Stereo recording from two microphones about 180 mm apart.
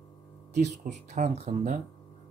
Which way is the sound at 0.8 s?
40° right (ahead or behind).